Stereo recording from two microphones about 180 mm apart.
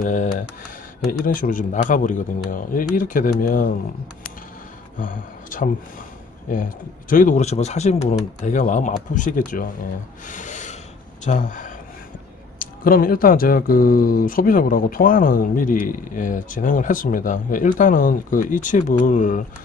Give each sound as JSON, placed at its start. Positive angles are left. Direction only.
{"t": 0.0, "sound": "speech", "side_deg": 45}
{"t": 4.9, "sound": "speech", "side_deg": 50}
{"t": 10.2, "sound": "rub", "side_deg": 45}
{"t": 11.2, "sound": "speech", "side_deg": 45}